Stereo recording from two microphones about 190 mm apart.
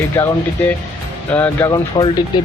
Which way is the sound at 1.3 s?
10° left (ahead or behind).